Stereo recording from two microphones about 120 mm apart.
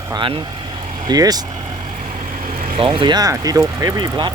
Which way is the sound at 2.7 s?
45° right (ahead or behind).